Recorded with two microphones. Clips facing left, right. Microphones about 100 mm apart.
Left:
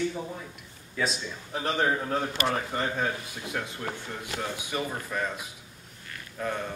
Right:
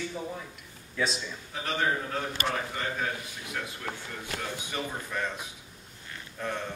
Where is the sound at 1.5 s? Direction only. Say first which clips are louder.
Left 4 dB; 35° left (ahead or behind).